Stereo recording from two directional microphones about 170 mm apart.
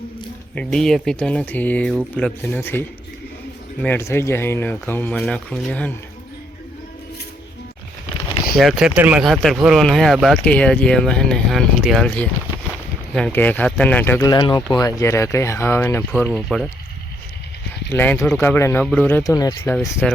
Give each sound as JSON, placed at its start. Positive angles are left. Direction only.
{"t": 0.5, "sound": "speech", "side_deg": 5}
{"t": 8.5, "sound": "speech", "side_deg": 0}
{"t": 13.1, "sound": "speech", "side_deg": 5}
{"t": 14.3, "sound": "speech", "side_deg": 25}
{"t": 17.8, "sound": "speech", "side_deg": 10}
{"t": 19.8, "sound": "speech", "side_deg": 10}